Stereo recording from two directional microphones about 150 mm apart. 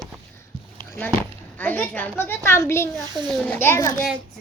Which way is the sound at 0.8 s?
15° left (ahead or behind).